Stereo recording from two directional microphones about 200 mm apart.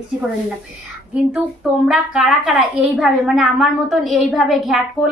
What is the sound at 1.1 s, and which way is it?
A woman's voice, 5° right (ahead or behind).